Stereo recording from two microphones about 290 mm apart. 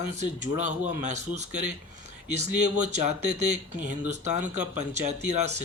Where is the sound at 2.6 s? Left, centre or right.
Right.